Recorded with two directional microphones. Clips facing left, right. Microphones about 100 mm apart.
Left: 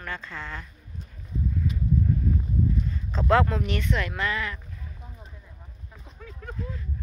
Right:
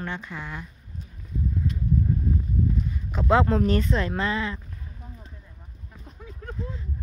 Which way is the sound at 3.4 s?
35° right (ahead or behind).